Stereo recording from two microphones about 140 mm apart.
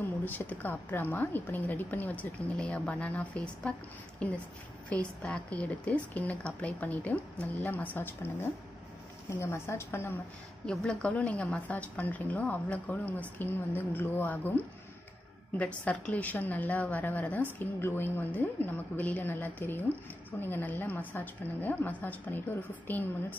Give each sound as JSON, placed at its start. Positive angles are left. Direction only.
{"t": 0.2, "sound": "a woman's voice", "side_deg": 10}
{"t": 10.7, "sound": "a woman's voice", "side_deg": 5}
{"t": 15.5, "sound": "a woman's voice", "side_deg": 10}